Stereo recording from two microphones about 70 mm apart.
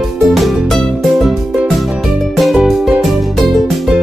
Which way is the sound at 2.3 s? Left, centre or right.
Centre.